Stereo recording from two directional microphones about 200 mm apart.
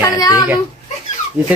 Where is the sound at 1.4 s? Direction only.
10° right (ahead or behind).